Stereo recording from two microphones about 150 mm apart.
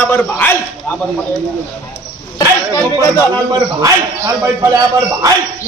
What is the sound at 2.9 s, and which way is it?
A man's voice, 25° right (ahead or behind).